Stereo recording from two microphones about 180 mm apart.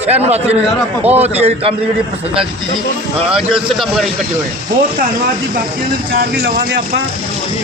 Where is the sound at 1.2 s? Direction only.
35° right (ahead or behind).